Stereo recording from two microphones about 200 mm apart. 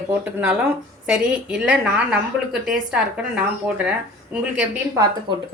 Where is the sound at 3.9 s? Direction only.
5° right (ahead or behind).